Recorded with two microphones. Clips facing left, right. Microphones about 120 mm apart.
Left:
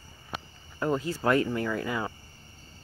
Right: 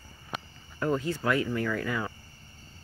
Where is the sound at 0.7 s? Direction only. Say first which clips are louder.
Even; 20° left (ahead or behind).